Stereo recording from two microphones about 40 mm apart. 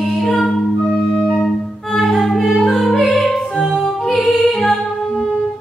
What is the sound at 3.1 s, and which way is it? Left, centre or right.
Music, centre.